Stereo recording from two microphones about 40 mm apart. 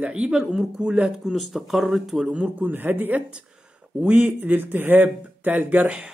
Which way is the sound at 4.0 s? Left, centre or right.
Right.